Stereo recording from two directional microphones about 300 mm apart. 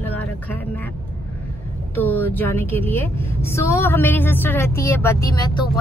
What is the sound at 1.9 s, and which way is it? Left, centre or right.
A woman's voice, centre.